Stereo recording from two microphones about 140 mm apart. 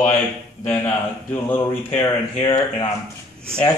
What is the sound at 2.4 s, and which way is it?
Speech, 30° left (ahead or behind).